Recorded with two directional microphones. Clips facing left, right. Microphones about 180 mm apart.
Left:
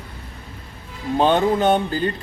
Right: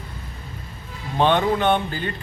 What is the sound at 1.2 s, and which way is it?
Speech, 40° left (ahead or behind).